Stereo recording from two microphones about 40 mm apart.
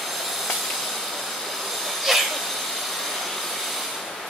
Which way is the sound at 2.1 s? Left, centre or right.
Centre.